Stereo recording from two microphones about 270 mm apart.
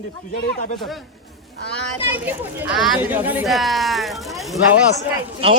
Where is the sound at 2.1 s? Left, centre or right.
Centre.